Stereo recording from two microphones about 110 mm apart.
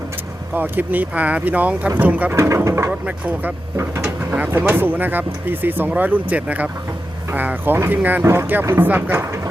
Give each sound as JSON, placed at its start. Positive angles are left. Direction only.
{"t": 0.5, "sound": "speech", "side_deg": -15}
{"t": 2.3, "sound": "speech", "side_deg": -25}
{"t": 2.9, "sound": "speech", "side_deg": -15}